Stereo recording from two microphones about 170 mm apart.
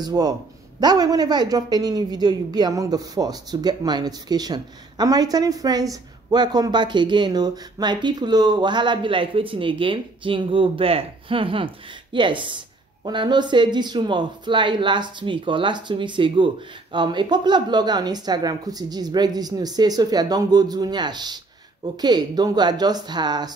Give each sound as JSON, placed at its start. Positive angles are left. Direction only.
{"t": 0.0, "sound": "a woman's voice", "side_deg": -20}